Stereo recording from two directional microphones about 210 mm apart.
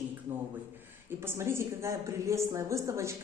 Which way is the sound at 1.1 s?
10° right (ahead or behind).